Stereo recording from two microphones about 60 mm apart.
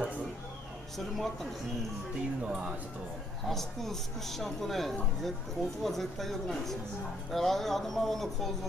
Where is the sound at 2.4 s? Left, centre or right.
Centre.